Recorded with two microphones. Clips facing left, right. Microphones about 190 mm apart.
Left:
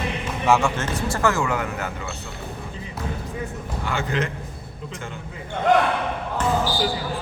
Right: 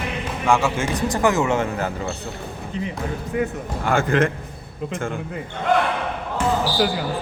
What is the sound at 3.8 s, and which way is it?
Speech, 50° right (ahead or behind).